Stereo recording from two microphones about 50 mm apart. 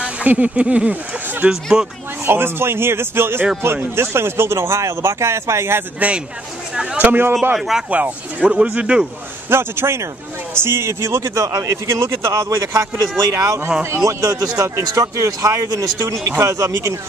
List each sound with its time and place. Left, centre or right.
0.3 s speech: right
1.5 s speech: centre
2.2 s speech: right
5.9 s speech: right
7.1 s speech: right
7.5 s speech: centre
7.9 s speech: right
9.5 s speech: right
13.8 s speech: right